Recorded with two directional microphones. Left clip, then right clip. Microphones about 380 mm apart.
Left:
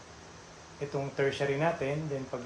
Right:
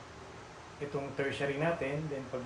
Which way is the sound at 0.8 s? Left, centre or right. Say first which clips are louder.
Left 2 dB; centre.